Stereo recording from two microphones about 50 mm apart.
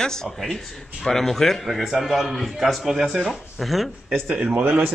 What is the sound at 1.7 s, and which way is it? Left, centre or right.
A man's voice, centre.